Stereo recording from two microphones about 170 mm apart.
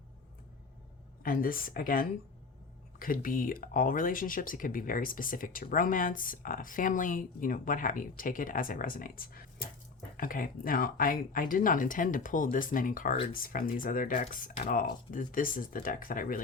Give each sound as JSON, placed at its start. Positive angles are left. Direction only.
{"t": 1.2, "sound": "speech", "side_deg": 55}